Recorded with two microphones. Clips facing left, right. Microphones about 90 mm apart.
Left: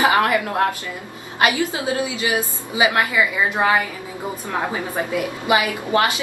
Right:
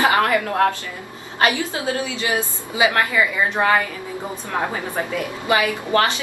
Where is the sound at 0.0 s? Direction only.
20° left (ahead or behind).